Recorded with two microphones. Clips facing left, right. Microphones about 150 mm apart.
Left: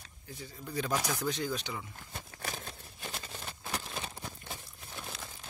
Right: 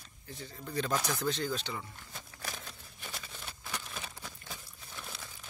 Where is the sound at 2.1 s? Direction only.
45° left (ahead or behind).